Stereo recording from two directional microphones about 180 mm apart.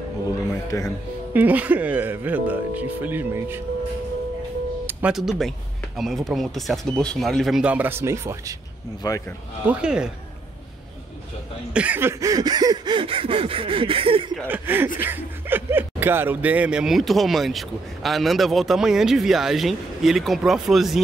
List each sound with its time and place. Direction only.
0.7 s speech: 20° left (ahead or behind)
1.3 s speech: 10° right (ahead or behind)
4.8 s music: 5° right (ahead or behind)
5.9 s speech: centre (ahead or behind); by 8.5 s 15° right (ahead or behind)
9.0 s a man's voice: 20° left (ahead or behind)
9.7 s speech: 5° right (ahead or behind)
11.7 s a sound: 10° right (ahead or behind); by 14.2 s 30° right (ahead or behind)
14.5 s speech: 10° right (ahead or behind)